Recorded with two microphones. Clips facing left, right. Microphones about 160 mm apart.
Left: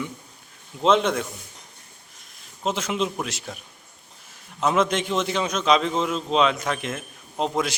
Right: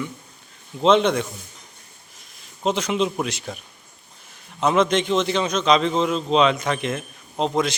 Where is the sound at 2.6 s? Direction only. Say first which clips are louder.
Right 4 dB; centre (ahead or behind).